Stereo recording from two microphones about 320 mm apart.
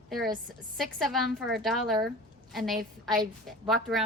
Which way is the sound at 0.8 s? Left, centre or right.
Centre.